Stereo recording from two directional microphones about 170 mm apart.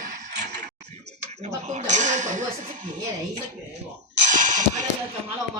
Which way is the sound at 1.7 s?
45° right (ahead or behind).